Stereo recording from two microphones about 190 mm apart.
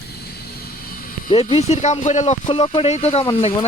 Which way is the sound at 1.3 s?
30° left (ahead or behind).